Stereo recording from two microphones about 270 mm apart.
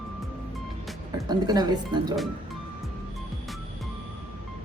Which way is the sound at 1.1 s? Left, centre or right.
Centre.